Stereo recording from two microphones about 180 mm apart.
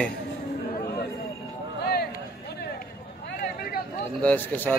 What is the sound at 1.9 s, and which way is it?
Run, 60° left (ahead or behind).